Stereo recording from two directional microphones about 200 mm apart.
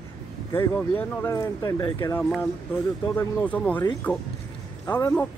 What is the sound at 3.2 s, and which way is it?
Speech, 5° left (ahead or behind).